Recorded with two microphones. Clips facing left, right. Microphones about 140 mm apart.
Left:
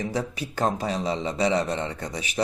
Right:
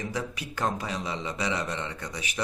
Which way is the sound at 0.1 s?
35° left (ahead or behind).